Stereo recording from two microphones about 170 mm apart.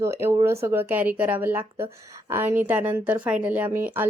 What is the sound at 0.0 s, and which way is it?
A woman's voice, 15° right (ahead or behind).